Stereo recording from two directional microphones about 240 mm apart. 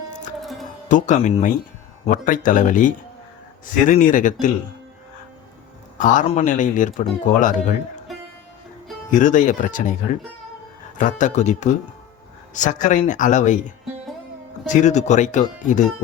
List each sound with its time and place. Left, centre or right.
0.1 s music: left
0.9 s speech: left
6.0 s speech: left
9.0 s speech: left
10.9 s speech: left